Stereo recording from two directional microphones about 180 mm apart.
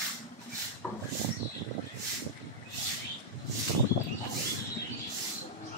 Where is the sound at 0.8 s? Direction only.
5° left (ahead or behind).